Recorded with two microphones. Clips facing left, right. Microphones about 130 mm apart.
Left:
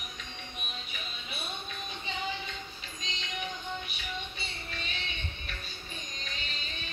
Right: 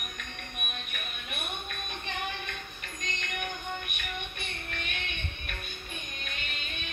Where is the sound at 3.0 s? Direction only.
60° right (ahead or behind).